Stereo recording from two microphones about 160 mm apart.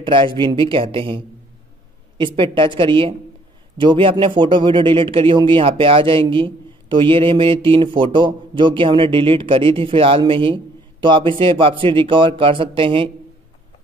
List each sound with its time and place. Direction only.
0.0 s speech: 30° right (ahead or behind)